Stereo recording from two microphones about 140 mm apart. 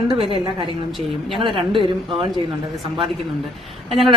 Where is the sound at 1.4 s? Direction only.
35° right (ahead or behind).